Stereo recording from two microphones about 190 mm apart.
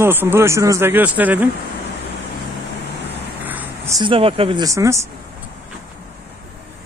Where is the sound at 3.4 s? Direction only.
10° right (ahead or behind).